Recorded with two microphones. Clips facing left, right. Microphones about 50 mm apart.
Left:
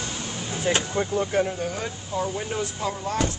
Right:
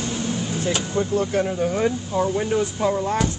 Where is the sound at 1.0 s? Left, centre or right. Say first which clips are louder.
Right 2 dB; centre.